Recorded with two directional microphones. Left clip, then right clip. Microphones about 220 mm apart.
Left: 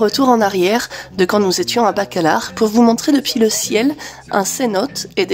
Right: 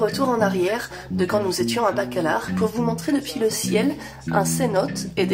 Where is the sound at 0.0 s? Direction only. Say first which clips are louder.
Left 7 dB; 40° left (ahead or behind).